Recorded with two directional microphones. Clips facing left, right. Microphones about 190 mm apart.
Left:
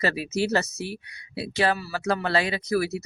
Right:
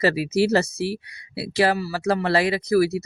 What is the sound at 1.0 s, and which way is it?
Speech, 35° right (ahead or behind).